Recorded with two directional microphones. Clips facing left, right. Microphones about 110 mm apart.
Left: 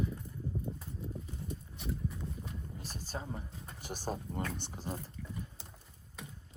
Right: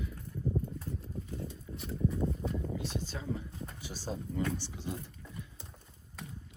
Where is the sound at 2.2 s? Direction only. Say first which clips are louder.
Right 10 dB; 70° right (ahead or behind).